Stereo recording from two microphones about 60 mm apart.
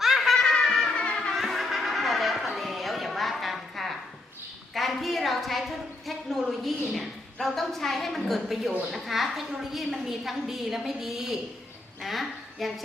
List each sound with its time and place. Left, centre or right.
0.0 s music: centre
0.3 s snicker: centre
0.9 s music: centre
1.4 s chatter: centre
4.7 s a woman's voice: centre